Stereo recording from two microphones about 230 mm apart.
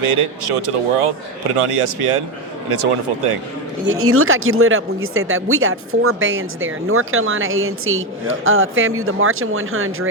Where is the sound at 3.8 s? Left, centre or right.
Right.